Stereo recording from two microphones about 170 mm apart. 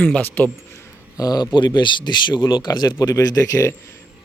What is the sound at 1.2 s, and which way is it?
Speech, 20° left (ahead or behind).